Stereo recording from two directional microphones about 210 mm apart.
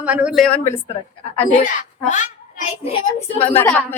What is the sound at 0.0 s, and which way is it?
Speech, 5° right (ahead or behind).